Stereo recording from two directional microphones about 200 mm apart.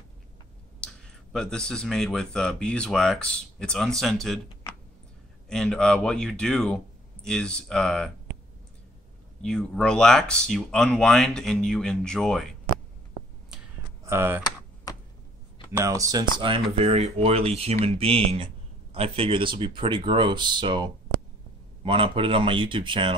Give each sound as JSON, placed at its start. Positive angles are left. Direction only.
{"t": 1.3, "sound": "speech", "side_deg": 5}
{"t": 9.4, "sound": "speech", "side_deg": 5}
{"t": 14.0, "sound": "speech", "side_deg": -10}
{"t": 15.7, "sound": "speech", "side_deg": -15}